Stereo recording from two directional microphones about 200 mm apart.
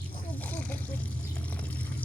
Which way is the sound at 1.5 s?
5° left (ahead or behind).